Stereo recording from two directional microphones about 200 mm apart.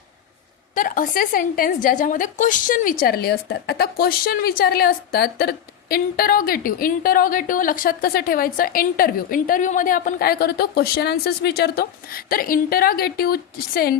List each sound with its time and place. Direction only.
0.7 s a woman's voice: 40° left (ahead or behind)